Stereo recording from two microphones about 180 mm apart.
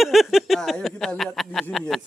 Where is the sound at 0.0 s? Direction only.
Centre (ahead or behind).